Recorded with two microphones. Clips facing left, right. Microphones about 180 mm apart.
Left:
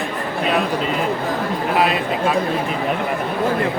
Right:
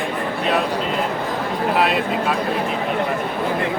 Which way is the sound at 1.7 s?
Centre (ahead or behind).